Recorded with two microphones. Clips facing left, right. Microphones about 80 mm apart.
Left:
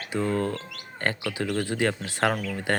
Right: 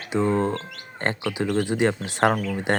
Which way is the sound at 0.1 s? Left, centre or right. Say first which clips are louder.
Right 4 dB; right.